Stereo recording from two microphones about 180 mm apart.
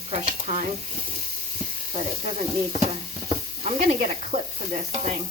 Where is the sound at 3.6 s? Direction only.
35° right (ahead or behind).